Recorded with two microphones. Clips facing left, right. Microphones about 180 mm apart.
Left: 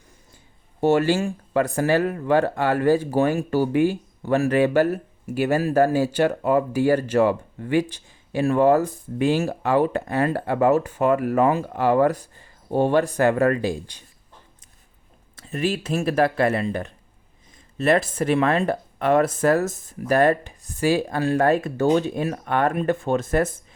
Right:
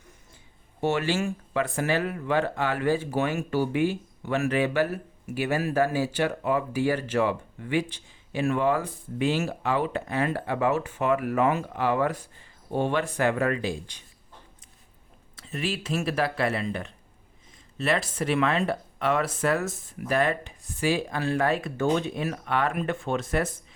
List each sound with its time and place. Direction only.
0.8 s speech: 40° left (ahead or behind)
15.4 s speech: 45° left (ahead or behind)